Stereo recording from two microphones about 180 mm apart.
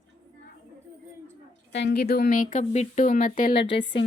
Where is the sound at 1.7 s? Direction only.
65° left (ahead or behind); by 3.5 s 45° left (ahead or behind).